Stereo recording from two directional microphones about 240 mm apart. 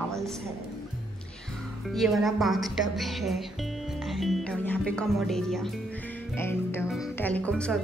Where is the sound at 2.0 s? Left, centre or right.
Centre.